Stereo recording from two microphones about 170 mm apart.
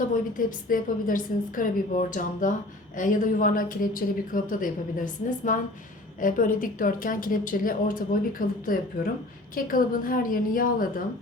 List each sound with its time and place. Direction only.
0.1 s a woman's voice: 55° left (ahead or behind)